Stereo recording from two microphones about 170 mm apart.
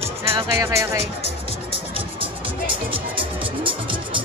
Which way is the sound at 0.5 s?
15° right (ahead or behind).